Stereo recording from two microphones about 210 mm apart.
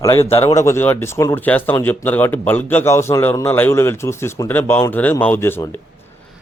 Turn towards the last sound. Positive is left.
turn(degrees=10)  # may be behind; listen again after turning